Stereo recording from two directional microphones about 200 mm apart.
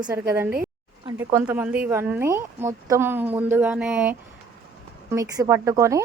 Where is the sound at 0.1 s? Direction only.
10° right (ahead or behind).